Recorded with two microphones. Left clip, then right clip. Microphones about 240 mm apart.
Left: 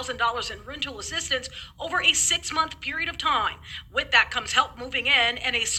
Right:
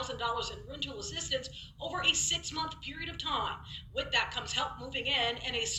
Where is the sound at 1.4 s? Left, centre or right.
Left.